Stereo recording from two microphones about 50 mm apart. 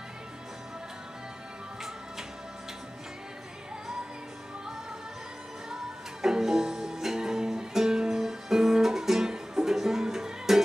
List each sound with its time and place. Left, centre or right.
6.2 s music: centre